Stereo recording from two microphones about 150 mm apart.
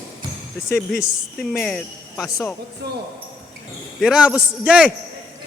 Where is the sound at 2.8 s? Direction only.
90° right.